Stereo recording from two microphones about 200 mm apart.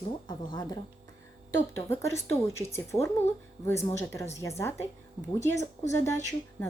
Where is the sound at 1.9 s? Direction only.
15° left (ahead or behind).